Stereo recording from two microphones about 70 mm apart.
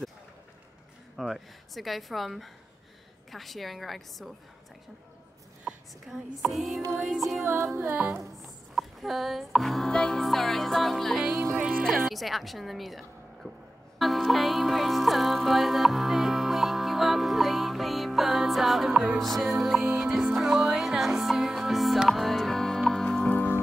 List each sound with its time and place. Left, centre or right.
1.1 s speech: centre
6.4 s speech: centre
7.4 s music: right
7.8 s music: right
8.2 s speech: centre
11.5 s music: centre
12.1 s a woman's voice: centre
13.9 s music: centre
23.3 s music: left